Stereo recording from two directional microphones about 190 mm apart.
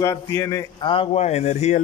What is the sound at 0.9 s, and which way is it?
Speech, 30° left (ahead or behind).